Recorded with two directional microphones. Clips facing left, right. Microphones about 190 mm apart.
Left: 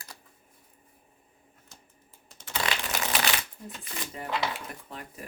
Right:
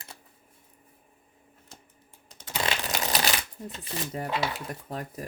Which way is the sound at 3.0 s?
35° right (ahead or behind).